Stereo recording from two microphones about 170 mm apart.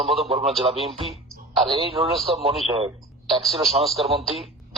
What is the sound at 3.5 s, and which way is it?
Speech, 35° right (ahead or behind).